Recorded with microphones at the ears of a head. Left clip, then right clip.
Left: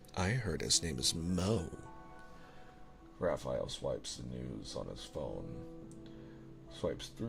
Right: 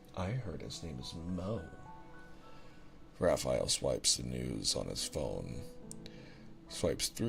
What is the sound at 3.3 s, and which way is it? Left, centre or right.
Speech, right.